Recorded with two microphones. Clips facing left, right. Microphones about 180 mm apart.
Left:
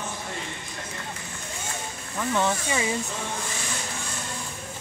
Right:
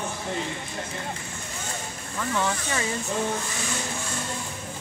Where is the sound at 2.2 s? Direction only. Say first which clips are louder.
Left 2 dB; 20° left (ahead or behind).